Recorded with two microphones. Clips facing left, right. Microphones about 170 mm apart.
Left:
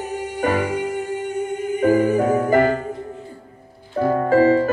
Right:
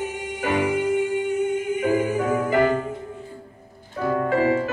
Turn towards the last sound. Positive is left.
turn(degrees=40)  # may be behind; listen again after turning